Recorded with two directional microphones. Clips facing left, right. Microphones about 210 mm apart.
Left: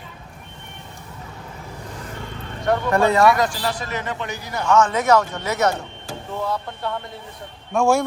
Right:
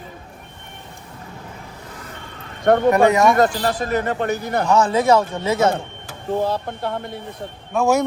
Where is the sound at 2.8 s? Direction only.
15° right (ahead or behind).